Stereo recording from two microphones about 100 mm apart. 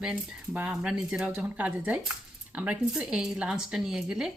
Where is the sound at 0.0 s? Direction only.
10° right (ahead or behind).